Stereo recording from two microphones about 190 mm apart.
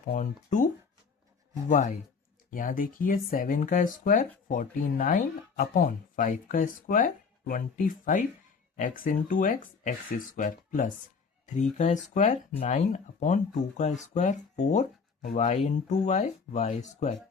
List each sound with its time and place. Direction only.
0.1 s speech: 40° left (ahead or behind)
1.7 s speech: 40° left (ahead or behind)